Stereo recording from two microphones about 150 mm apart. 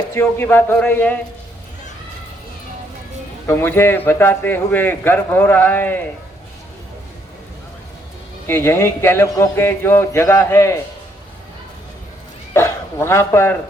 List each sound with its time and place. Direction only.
0.1 s a man's voice: 15° left (ahead or behind)
3.4 s a man's voice: 15° left (ahead or behind)
8.4 s a man's voice: 15° left (ahead or behind)
12.5 s speech: 15° left (ahead or behind)